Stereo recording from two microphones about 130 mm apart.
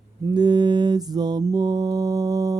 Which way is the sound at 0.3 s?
35° right (ahead or behind).